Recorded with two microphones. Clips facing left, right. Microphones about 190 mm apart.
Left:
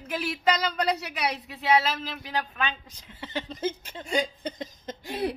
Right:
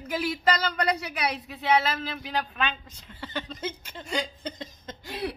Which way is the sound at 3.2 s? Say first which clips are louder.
Left 3 dB; 20° left (ahead or behind).